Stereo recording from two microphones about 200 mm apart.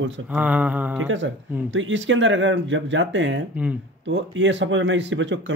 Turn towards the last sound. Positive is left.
turn(degrees=-65)  # may be behind; listen again after turning